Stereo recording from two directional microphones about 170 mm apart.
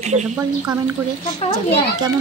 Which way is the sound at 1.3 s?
35° left (ahead or behind).